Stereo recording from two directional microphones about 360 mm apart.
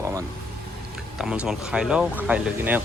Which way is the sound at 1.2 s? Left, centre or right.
Centre.